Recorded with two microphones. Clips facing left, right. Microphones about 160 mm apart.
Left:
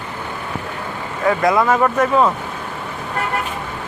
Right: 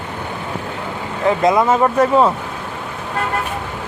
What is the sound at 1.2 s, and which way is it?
Speech, 20° right (ahead or behind).